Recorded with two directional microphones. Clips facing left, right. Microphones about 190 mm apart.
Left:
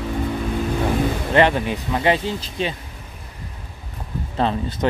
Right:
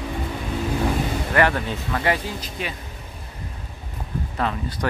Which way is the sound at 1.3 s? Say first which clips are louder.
Left 4 dB; 20° left (ahead or behind).